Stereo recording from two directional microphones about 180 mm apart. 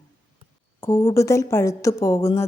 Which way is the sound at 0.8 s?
15° left (ahead or behind).